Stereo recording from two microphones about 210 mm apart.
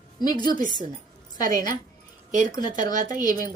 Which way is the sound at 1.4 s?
40° right (ahead or behind).